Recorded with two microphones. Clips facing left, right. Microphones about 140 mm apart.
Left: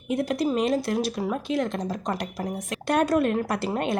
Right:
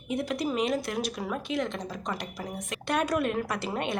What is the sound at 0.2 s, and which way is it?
A woman's voice, 40° left (ahead or behind).